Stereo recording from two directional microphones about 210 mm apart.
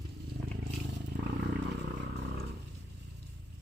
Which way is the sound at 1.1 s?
50° right (ahead or behind).